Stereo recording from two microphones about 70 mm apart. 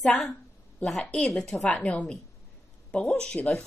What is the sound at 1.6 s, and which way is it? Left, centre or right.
Speech, centre.